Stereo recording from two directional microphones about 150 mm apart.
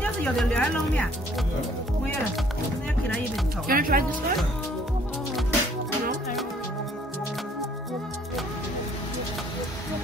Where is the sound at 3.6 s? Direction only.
75° right (ahead or behind).